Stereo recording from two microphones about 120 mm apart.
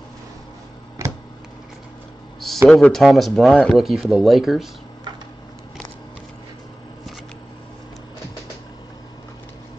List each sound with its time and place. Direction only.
2.7 s speech: centre (ahead or behind)